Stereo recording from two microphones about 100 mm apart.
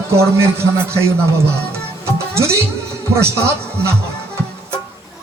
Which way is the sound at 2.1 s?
25° right (ahead or behind).